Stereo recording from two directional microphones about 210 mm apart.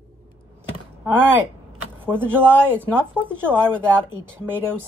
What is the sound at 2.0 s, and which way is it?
Speech, 10° right (ahead or behind).